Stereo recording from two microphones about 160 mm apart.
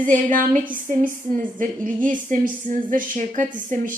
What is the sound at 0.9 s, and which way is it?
A woman's voice, 55° right (ahead or behind).